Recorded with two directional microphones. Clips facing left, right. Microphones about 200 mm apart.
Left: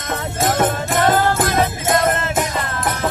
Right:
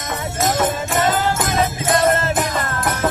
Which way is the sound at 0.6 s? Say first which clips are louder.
Left 3 dB; 60° left (ahead or behind).